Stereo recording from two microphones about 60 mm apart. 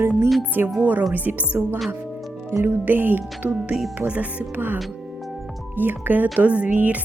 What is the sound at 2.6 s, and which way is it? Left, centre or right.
Speech, right.